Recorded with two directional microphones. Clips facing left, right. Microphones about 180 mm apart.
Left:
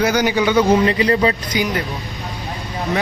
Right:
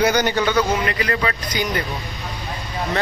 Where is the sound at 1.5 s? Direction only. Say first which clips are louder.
Left 3 dB; 10° left (ahead or behind).